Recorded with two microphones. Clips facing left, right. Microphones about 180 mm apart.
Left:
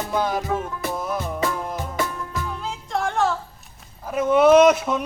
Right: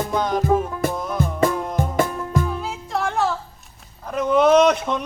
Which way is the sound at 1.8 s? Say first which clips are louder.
Right 6 dB; 50° right (ahead or behind).